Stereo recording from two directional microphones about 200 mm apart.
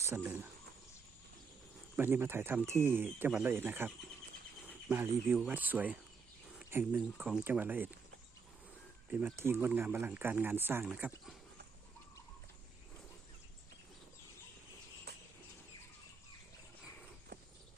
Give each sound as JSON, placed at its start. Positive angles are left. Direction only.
{"t": 0.0, "sound": "speech", "side_deg": -10}
{"t": 2.0, "sound": "speech", "side_deg": -10}
{"t": 9.0, "sound": "speech", "side_deg": -10}
{"t": 15.1, "sound": "a sound", "side_deg": -55}